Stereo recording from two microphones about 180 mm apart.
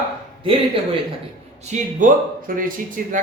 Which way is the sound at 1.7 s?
45° right (ahead or behind).